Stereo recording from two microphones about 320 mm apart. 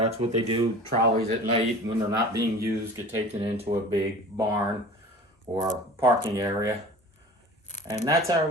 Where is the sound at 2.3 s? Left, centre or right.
Centre.